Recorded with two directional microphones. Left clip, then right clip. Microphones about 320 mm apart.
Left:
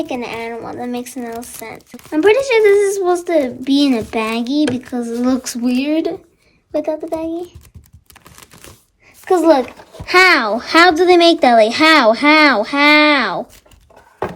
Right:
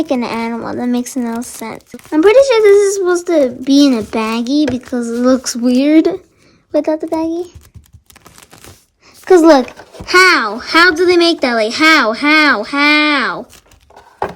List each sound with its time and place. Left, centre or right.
0.0 s speech: centre
10.1 s speech: centre